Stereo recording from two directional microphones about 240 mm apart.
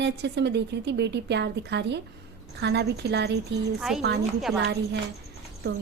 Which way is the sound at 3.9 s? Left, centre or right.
Centre.